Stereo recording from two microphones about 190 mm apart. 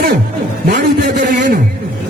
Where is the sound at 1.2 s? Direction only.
40° right (ahead or behind).